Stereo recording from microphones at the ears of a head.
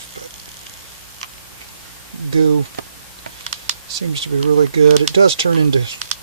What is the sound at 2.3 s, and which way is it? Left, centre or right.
Speech, right.